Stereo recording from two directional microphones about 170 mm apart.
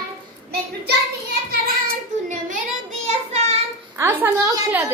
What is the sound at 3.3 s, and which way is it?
Child singing, 40° right (ahead or behind).